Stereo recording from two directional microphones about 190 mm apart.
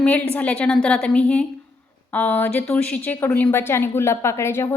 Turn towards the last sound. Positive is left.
turn(degrees=15)  # may be behind; listen again after turning